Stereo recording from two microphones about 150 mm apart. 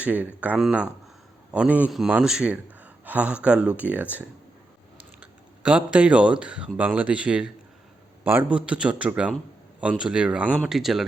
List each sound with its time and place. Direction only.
0.0 s a man's voice: 10° right (ahead or behind)